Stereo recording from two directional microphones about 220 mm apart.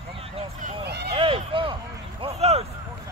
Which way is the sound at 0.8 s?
50° right (ahead or behind).